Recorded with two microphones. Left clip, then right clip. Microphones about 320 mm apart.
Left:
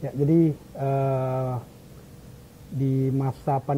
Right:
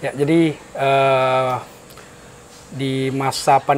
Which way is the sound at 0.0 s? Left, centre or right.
Centre.